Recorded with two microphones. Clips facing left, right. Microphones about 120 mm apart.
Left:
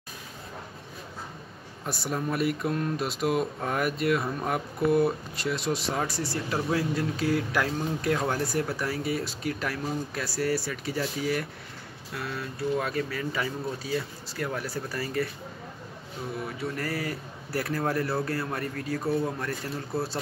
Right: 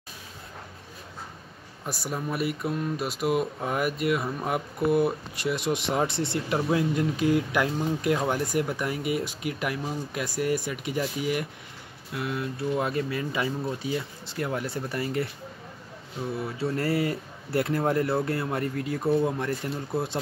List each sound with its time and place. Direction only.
1.9 s speech: 10° right (ahead or behind)
5.9 s speech: 25° right (ahead or behind)
16.4 s speech: 30° right (ahead or behind)